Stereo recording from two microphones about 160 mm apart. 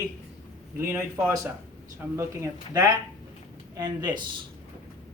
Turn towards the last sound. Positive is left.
turn(degrees=-25)  # may be behind; listen again after turning